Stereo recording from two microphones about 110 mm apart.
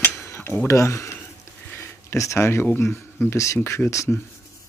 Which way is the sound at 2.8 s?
25° left (ahead or behind).